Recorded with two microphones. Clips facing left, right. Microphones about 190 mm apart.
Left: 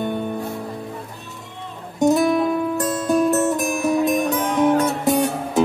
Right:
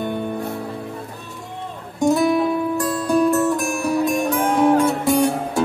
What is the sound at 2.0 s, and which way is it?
Music, 20° left (ahead or behind).